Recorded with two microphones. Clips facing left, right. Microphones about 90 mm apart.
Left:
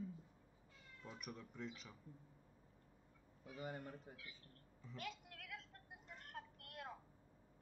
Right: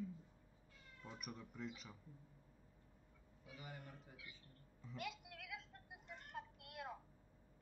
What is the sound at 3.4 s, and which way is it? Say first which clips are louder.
Speech: left 6 dB; 40° left (ahead or behind).